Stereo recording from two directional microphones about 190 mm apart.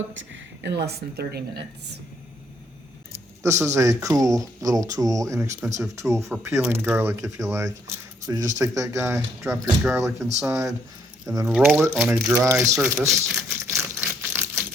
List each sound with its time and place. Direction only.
0.1 s a woman's voice: 75° right (ahead or behind); by 2.0 s 60° right (ahead or behind)
3.4 s speech: 15° right (ahead or behind)
13.7 s typewriter: 10° right (ahead or behind)